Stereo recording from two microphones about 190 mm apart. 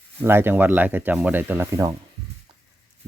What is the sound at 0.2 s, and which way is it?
Speech, 10° right (ahead or behind).